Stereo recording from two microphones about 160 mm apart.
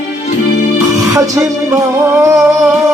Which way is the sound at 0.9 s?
20° right (ahead or behind).